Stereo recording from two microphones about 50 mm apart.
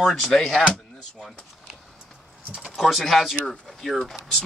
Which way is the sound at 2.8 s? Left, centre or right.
Centre.